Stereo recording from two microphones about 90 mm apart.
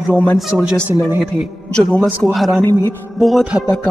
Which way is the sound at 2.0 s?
20° right (ahead or behind).